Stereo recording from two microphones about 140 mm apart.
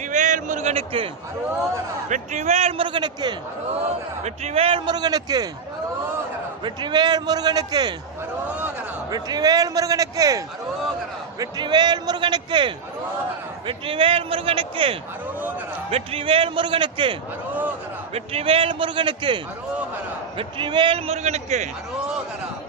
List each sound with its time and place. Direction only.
0.0 s a sound: 60° right (ahead or behind); by 1.1 s 40° right (ahead or behind)
2.0 s a man's voice: 60° right (ahead or behind); by 3.3 s 30° right (ahead or behind)
3.7 s a man's voice: 50° right (ahead or behind); by 5.5 s 30° right (ahead or behind)
6.7 s a man's voice: 30° right (ahead or behind)
9.0 s a man's voice: 25° right (ahead or behind)
17.5 s a sound: 10° right (ahead or behind)
18.1 s a man's voice: 45° right (ahead or behind)